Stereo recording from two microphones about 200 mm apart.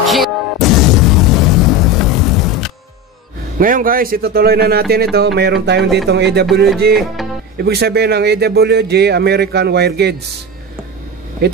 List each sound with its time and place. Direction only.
0.0 s music: centre (ahead or behind)
3.5 s a man's voice: 45° right (ahead or behind)
11.4 s speech: 55° right (ahead or behind)